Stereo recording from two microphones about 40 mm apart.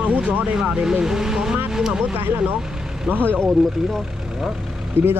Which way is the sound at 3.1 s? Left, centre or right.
Right.